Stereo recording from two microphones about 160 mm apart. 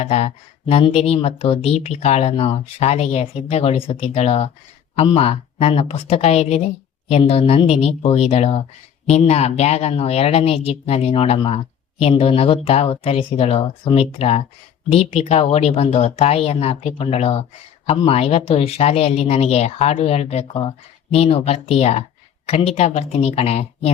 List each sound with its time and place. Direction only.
0.0 s speech: 40° left (ahead or behind)